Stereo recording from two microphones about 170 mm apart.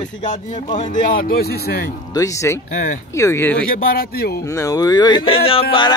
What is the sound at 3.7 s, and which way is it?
Speech, 60° left (ahead or behind).